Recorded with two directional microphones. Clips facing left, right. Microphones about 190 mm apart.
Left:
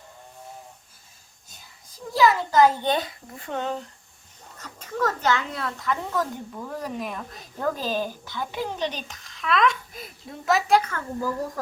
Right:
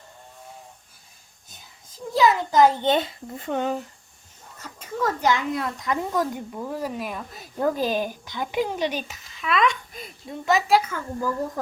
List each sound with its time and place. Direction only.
1.9 s a child's voice: 20° right (ahead or behind)